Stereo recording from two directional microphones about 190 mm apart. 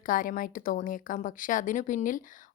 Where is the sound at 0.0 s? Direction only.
45° left (ahead or behind).